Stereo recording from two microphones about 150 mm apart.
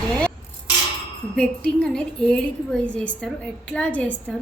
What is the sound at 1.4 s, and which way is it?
A woman's voice, 5° left (ahead or behind).